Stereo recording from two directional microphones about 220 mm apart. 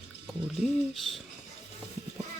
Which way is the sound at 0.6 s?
Centre (ahead or behind).